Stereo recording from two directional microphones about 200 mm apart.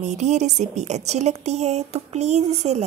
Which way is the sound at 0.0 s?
35° right (ahead or behind).